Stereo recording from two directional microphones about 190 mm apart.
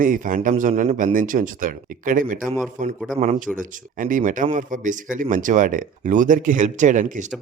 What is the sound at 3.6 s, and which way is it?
Speech, 45° right (ahead or behind).